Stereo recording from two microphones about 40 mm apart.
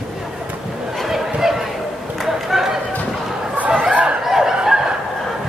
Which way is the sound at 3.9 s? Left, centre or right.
Right.